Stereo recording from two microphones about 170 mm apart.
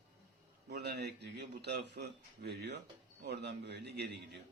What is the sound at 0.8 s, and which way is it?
A man's voice, 75° right (ahead or behind).